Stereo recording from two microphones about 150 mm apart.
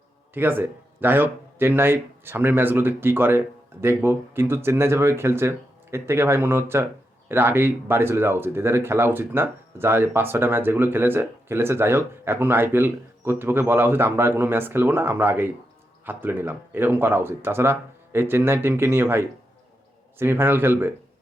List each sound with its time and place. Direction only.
0.3 s speech: 15° right (ahead or behind)